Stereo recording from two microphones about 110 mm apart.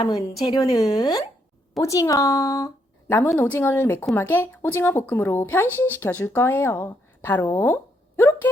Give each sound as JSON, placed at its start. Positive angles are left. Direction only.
{"t": 0.4, "sound": "a woman's voice", "side_deg": 35}